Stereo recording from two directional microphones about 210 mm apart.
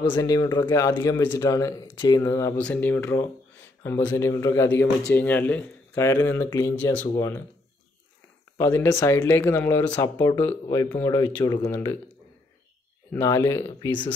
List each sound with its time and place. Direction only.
0.0 s speech: 20° left (ahead or behind)
8.5 s speech: 15° left (ahead or behind)
13.1 s speech: 15° left (ahead or behind)